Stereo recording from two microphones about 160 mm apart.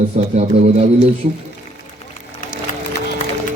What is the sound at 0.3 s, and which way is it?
Speech, 45° right (ahead or behind).